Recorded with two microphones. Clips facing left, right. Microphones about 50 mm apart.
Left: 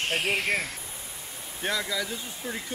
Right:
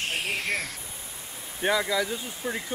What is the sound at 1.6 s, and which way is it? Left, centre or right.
Speech, centre.